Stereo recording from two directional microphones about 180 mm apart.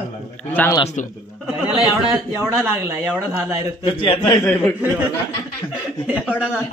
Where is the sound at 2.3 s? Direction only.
15° right (ahead or behind).